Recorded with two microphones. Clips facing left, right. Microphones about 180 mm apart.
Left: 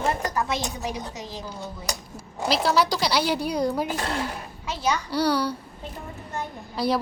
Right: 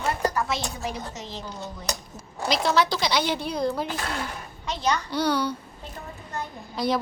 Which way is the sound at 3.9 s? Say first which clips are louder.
Left 3 dB; 35° left (ahead or behind).